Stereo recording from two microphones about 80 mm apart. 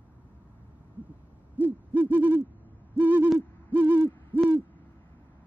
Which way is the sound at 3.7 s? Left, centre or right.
Centre.